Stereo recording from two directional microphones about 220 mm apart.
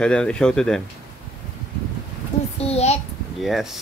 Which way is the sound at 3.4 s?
Centre (ahead or behind).